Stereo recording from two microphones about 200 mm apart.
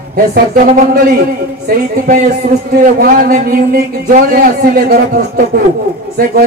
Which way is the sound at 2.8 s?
45° right (ahead or behind).